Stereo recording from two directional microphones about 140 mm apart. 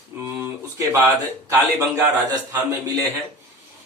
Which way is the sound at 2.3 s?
25° right (ahead or behind).